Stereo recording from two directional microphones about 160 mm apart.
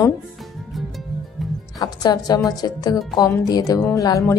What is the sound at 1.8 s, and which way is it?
A woman's voice, 25° left (ahead or behind).